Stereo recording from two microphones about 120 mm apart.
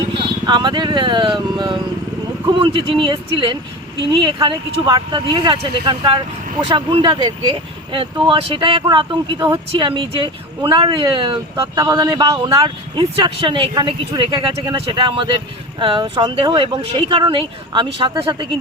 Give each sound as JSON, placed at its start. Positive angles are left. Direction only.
{"t": 0.2, "sound": "speech", "side_deg": -40}